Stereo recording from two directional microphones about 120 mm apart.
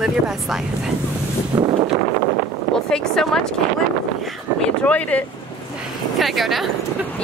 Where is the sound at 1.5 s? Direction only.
35° right (ahead or behind).